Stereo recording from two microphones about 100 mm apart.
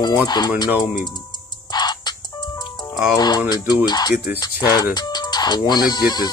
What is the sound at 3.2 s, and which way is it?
Speech, 40° left (ahead or behind).